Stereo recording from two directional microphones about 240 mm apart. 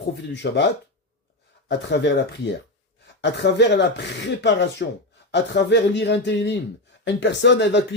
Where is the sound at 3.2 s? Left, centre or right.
Left.